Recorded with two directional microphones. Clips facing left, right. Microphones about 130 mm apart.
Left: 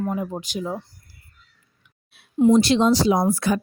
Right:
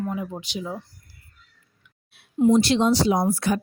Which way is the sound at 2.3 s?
90° left.